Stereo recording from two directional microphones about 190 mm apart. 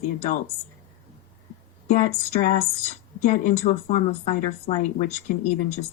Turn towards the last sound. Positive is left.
turn(degrees=40)  # may be behind; listen again after turning